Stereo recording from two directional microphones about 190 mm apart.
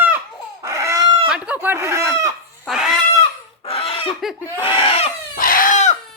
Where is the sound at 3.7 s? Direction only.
30° left (ahead or behind).